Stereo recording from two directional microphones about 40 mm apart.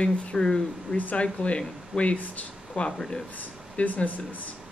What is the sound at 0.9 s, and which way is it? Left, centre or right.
Speech, left.